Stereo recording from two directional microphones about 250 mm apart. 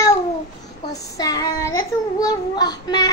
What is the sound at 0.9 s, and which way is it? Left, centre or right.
Child singing, centre.